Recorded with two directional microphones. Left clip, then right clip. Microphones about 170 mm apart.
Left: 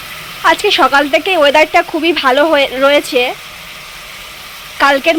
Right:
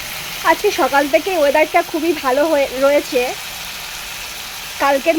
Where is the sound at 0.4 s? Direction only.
5° left (ahead or behind).